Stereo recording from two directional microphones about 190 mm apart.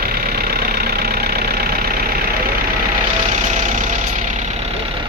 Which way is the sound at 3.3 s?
40° right (ahead or behind).